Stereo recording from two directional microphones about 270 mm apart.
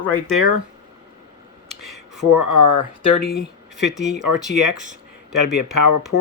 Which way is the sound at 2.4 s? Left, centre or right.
Left.